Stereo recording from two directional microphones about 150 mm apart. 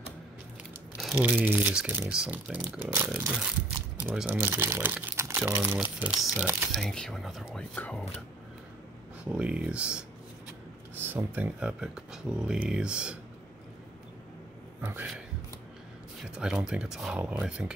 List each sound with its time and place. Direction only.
1.4 s speech: 10° right (ahead or behind); by 8.0 s 10° left (ahead or behind)
9.2 s speech: 10° right (ahead or behind)
14.8 s speech: 10° right (ahead or behind)